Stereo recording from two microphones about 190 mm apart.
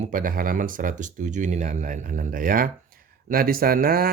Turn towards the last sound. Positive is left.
turn(degrees=-50)  # may be behind; listen again after turning